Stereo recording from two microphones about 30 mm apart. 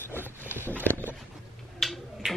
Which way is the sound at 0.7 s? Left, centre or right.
Left.